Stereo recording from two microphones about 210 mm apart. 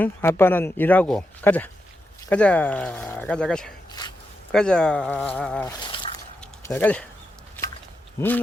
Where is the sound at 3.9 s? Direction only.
20° left (ahead or behind).